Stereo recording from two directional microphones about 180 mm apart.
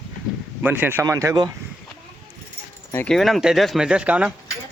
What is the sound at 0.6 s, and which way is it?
Speech, 10° right (ahead or behind).